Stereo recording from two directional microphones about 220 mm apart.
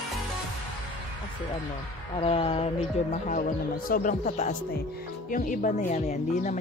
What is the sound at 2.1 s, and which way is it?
Speech, 25° left (ahead or behind).